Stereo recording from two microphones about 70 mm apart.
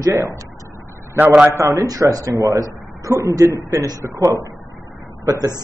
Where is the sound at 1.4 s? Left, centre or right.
Right.